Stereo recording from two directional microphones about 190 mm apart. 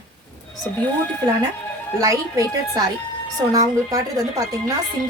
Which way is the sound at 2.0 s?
20° right (ahead or behind).